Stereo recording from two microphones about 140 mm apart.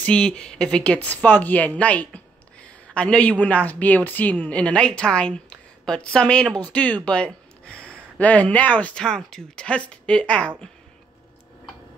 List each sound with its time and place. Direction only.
0.0 s speech: 10° left (ahead or behind)